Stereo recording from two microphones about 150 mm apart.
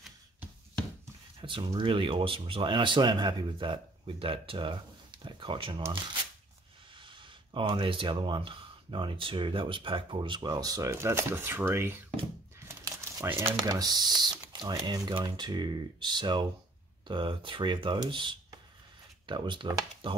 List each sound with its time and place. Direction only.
1.4 s speech: 30° right (ahead or behind)
5.2 s a sound: 35° right (ahead or behind)
7.0 s speech: 35° right (ahead or behind); by 12.0 s 15° right (ahead or behind)
12.5 s crumpling: 20° right (ahead or behind)
13.6 s speech: 25° right (ahead or behind)